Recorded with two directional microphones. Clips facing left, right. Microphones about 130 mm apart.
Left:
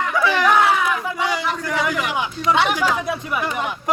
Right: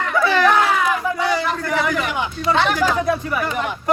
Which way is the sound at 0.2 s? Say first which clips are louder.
Right 1 dB; 10° left (ahead or behind).